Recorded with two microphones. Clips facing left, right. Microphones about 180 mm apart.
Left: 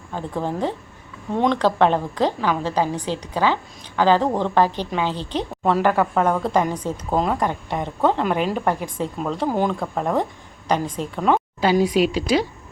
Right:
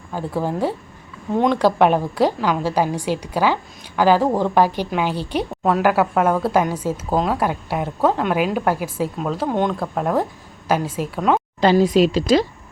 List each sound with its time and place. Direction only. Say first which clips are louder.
0.1 s a woman's voice: right 2 dB; 10° right (ahead or behind); by 12.5 s 10° left (ahead or behind)